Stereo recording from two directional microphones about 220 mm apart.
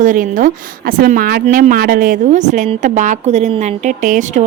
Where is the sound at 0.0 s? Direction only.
35° right (ahead or behind).